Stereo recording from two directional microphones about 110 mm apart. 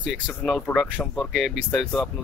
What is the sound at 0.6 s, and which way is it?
Speech, 5° left (ahead or behind).